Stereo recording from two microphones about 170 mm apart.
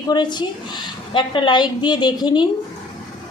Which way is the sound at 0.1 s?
25° left (ahead or behind).